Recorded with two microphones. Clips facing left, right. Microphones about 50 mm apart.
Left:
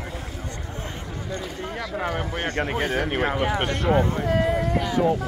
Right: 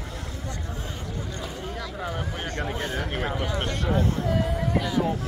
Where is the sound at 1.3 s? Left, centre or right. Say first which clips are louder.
Left 3 dB; left.